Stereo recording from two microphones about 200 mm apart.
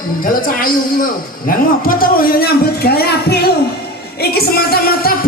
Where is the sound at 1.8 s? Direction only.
45° left (ahead or behind).